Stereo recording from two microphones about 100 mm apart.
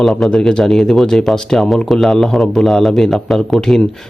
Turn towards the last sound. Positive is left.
turn(degrees=5)  # may be behind; listen again after turning